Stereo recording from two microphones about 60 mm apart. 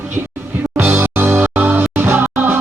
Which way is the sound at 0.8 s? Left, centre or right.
Right.